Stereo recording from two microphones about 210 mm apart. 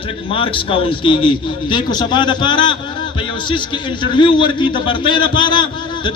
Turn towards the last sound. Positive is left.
turn(degrees=20)  # may be behind; listen again after turning